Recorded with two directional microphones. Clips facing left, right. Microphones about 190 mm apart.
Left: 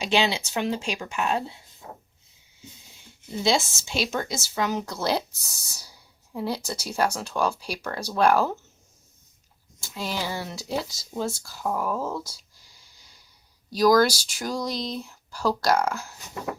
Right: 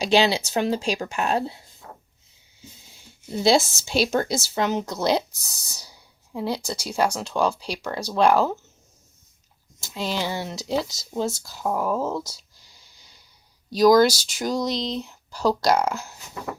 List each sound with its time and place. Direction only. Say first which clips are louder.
0.0 s speech: right 4 dB; 35° right (ahead or behind)
1.8 s a sound: left 2 dB; 20° left (ahead or behind)
3.4 s speech: right 5 dB; 35° right (ahead or behind); by 5.2 s 20° right (ahead or behind)
6.3 s speech: right 2 dB; 15° right (ahead or behind)
9.8 s speech: right 3 dB; 25° right (ahead or behind)
13.7 s speech: right 3 dB; 20° right (ahead or behind)